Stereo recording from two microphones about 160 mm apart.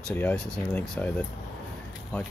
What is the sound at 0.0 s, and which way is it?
Speech, 10° left (ahead or behind).